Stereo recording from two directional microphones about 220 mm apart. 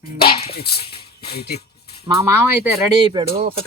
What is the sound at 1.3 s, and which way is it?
Speech, 45° left (ahead or behind).